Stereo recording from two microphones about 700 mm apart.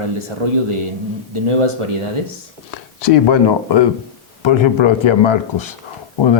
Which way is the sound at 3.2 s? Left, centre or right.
Left.